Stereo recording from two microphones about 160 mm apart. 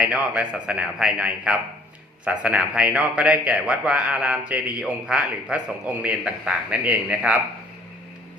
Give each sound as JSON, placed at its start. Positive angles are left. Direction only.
{"t": 0.0, "sound": "a man's voice", "side_deg": -5}